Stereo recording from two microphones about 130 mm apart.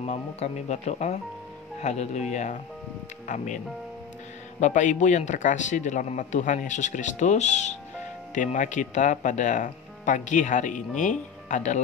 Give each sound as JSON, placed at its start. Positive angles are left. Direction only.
{"t": 0.0, "sound": "speech", "side_deg": 60}
{"t": 8.4, "sound": "speech", "side_deg": 70}